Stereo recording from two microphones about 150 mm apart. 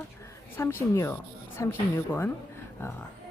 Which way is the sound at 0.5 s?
15° left (ahead or behind).